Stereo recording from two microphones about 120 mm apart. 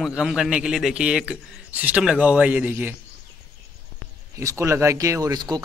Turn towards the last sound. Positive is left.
turn(degrees=-35)  # may be behind; listen again after turning